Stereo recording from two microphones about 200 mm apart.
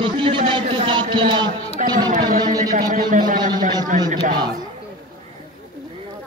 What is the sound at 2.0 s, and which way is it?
Chatter, 40° right (ahead or behind).